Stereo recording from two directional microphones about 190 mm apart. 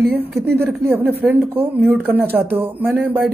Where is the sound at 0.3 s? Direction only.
55° right (ahead or behind).